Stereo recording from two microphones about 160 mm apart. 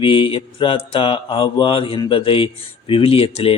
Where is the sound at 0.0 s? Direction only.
35° left (ahead or behind).